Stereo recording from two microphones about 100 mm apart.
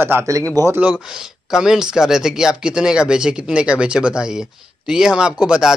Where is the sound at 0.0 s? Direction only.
25° right (ahead or behind).